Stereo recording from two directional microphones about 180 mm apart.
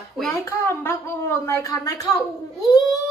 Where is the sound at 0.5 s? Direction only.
15° left (ahead or behind).